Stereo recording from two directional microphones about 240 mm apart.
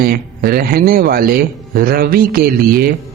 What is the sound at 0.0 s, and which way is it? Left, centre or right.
A woman's voice, right.